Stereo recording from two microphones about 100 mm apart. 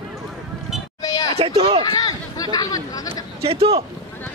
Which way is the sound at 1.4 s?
85° right.